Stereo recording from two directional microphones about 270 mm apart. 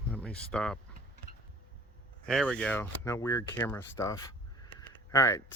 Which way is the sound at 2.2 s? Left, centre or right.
Centre.